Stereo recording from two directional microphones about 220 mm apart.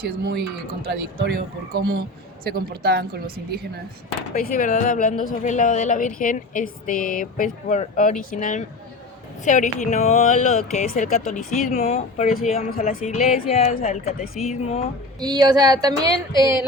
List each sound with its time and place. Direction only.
0.0 s a woman's voice: 50° right (ahead or behind)
4.4 s speech: 40° left (ahead or behind)
15.2 s speech: 20° right (ahead or behind)